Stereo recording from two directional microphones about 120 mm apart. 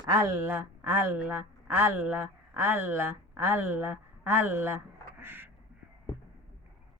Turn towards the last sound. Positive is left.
turn(degrees=-20)  # may be behind; listen again after turning